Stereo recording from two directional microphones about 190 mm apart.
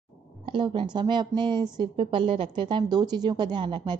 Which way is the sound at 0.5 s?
25° right (ahead or behind).